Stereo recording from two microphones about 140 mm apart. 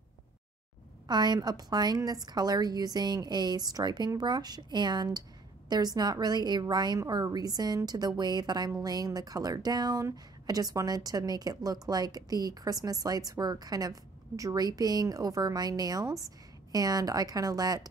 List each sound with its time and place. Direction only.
1.0 s a woman's voice: 30° right (ahead or behind)